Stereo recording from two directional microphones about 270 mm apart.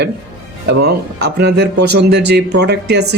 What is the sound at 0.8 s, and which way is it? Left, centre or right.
Speech, right.